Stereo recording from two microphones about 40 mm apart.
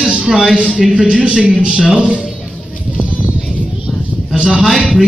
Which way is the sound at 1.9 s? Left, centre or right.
Right.